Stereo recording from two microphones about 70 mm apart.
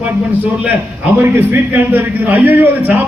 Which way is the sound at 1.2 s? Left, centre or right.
Right.